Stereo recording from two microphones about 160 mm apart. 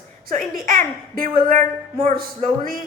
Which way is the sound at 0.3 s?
60° right (ahead or behind).